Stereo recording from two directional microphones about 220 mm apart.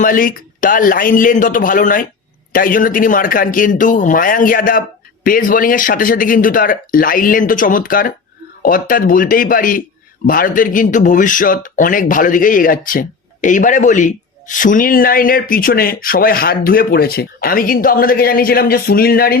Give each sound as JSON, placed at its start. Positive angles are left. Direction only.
{"t": 0.0, "sound": "speech", "side_deg": 40}